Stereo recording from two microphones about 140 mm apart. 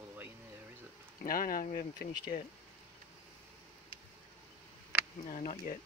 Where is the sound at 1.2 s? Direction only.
90° left.